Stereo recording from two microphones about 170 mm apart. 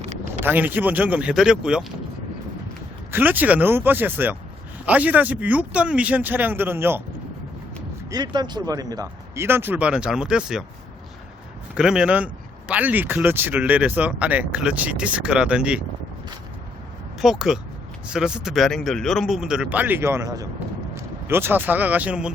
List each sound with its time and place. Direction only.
0.0 s a sound: 45° right (ahead or behind)
0.4 s speech: 10° right (ahead or behind)
3.1 s speech: 10° right (ahead or behind)
8.1 s speech: 25° right (ahead or behind); by 10.6 s 5° right (ahead or behind)
11.7 s speech: 5° right (ahead or behind)
17.2 s speech: centre (ahead or behind)